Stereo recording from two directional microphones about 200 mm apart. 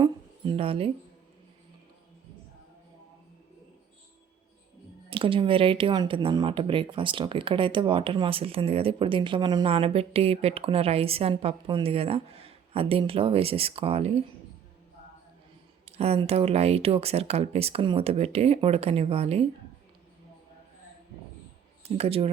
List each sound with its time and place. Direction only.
0.0 s a sound: 25° right (ahead or behind)
5.0 s speech: 25° right (ahead or behind)
15.9 s speech: 30° right (ahead or behind)
21.8 s speech: 30° right (ahead or behind)